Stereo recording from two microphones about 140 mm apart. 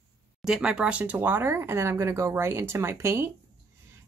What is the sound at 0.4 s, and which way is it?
Speech, 5° right (ahead or behind).